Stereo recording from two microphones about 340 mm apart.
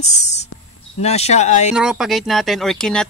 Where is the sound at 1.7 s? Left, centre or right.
Centre.